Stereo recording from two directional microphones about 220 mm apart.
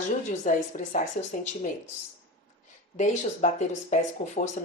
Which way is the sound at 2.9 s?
35° left (ahead or behind).